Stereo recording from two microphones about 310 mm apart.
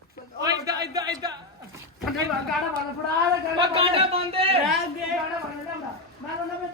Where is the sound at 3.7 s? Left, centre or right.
Centre.